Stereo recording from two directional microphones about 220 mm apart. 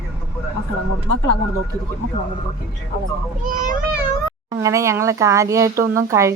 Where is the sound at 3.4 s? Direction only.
35° right (ahead or behind).